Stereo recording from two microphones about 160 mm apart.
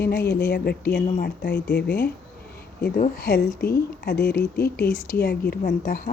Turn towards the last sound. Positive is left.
turn(degrees=65)  # may be behind; listen again after turning